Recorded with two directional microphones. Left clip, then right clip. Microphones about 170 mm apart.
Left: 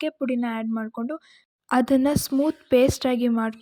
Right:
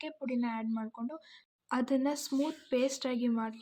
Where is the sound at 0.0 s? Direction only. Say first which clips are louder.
Left 10 dB; 40° left (ahead or behind).